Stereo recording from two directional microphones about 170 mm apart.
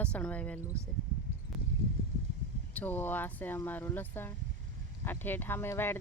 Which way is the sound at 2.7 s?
10° left (ahead or behind).